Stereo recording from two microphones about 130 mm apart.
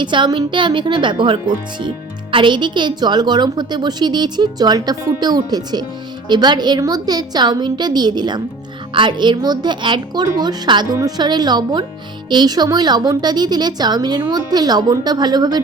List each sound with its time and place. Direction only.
0.0 s a woman's voice: 35° right (ahead or behind)